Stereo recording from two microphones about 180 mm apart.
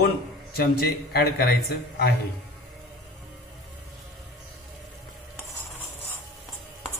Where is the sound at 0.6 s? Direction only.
60° left (ahead or behind).